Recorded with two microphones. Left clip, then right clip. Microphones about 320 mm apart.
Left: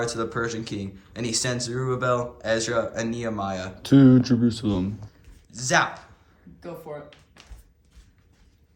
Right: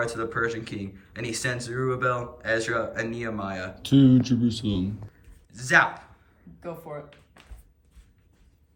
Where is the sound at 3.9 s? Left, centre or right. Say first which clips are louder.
Left 3 dB; left.